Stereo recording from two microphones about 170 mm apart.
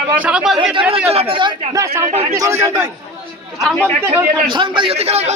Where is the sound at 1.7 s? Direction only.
15° right (ahead or behind).